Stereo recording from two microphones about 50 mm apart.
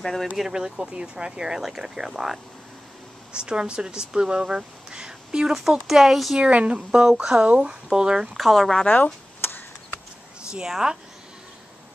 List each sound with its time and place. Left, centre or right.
0.0 s speech: centre
0.4 s speech: centre
3.3 s speech: centre
6.3 s speech: right
8.4 s speech: centre
8.8 s speech: left
9.4 s a sound: left
10.7 s speech: centre